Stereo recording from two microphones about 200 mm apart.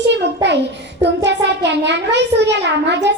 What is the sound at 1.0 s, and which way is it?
A child's voice, 60° right (ahead or behind).